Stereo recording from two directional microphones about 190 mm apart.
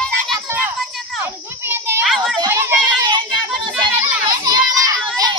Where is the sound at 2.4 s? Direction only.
10° right (ahead or behind).